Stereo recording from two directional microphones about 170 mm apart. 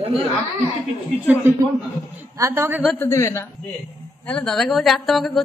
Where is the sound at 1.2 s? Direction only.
10° right (ahead or behind).